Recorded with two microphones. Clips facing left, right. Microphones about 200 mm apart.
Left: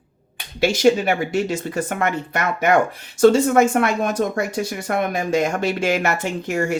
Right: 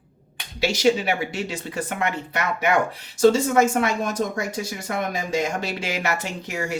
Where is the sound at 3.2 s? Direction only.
60° left (ahead or behind).